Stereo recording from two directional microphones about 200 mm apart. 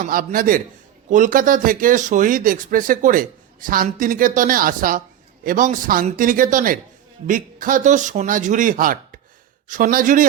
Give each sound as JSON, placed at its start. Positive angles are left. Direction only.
{"t": 0.0, "sound": "a man's voice", "side_deg": -40}